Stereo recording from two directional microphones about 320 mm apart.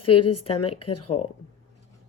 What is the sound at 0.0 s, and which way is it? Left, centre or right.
A woman's voice, left.